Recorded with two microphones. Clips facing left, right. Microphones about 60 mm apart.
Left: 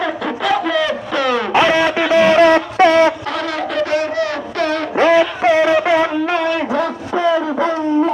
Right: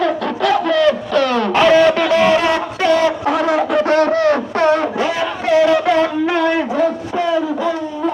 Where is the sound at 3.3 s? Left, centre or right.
Centre.